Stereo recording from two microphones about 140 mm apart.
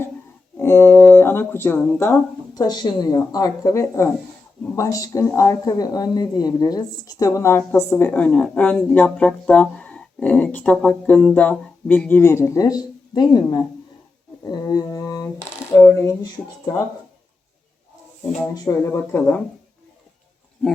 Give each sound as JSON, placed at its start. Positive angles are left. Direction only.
{"t": 0.5, "sound": "a sound", "side_deg": 15}
{"t": 2.6, "sound": "a woman's voice", "side_deg": 30}
{"t": 18.5, "sound": "a woman's voice", "side_deg": 25}
{"t": 19.1, "sound": "speech", "side_deg": 15}